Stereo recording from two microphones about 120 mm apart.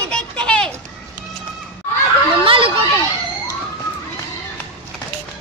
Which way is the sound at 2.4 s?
50° right (ahead or behind).